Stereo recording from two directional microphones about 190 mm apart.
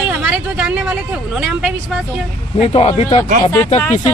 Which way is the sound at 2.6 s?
30° left (ahead or behind).